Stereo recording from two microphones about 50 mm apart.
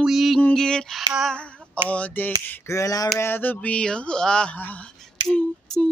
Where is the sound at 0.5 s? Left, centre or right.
Centre.